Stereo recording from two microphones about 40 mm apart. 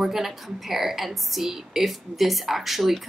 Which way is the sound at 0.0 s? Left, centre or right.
Centre.